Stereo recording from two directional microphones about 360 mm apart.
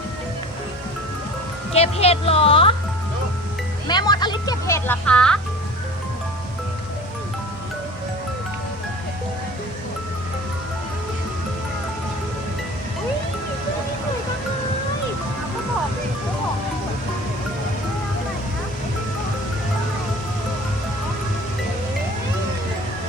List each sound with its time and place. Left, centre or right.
1.7 s speech: centre
3.8 s speech: centre